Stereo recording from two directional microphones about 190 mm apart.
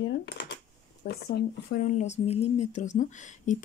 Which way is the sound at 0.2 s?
65° left (ahead or behind).